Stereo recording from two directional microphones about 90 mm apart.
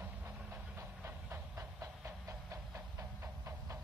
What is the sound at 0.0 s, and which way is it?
Train, 25° right (ahead or behind).